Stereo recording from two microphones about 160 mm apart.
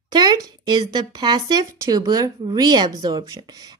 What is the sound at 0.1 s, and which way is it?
Speech, 25° right (ahead or behind).